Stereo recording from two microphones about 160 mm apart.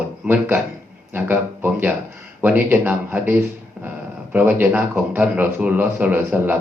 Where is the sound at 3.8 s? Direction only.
10° right (ahead or behind).